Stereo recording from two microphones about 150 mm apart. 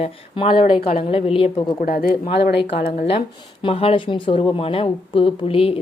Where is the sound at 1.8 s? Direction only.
85° left.